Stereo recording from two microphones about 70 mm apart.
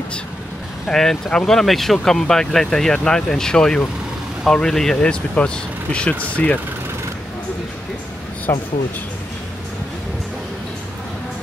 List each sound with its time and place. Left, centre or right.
0.8 s speech: centre
8.5 s speech: left